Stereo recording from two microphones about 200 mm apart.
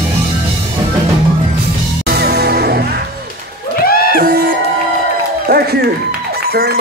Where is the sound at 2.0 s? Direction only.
55° right (ahead or behind).